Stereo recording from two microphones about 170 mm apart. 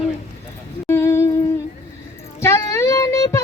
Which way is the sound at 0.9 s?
15° left (ahead or behind).